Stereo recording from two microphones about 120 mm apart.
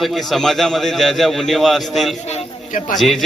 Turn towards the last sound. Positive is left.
turn(degrees=0)  # may be behind; listen again after turning